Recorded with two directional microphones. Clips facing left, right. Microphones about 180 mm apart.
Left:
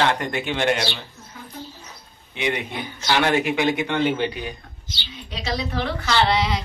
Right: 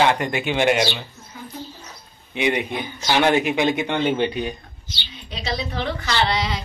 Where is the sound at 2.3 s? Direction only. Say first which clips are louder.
Right 4 dB; 15° right (ahead or behind).